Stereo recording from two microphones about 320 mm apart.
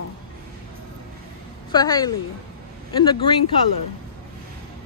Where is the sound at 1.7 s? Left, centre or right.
Centre.